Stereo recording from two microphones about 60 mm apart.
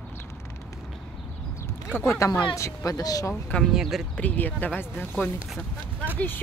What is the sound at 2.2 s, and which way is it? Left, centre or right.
Speech, left.